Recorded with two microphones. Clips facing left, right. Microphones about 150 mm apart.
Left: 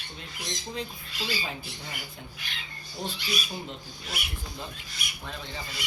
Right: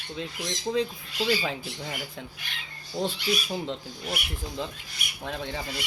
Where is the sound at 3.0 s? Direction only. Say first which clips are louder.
Right 7 dB; 90° right.